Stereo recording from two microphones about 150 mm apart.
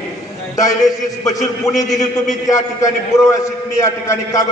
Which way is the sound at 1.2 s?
20° left (ahead or behind).